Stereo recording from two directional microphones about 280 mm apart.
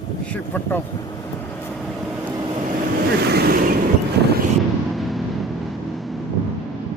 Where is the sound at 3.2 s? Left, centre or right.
Right.